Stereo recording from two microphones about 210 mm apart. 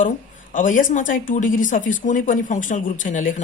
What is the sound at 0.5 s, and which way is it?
Speech, 40° left (ahead or behind).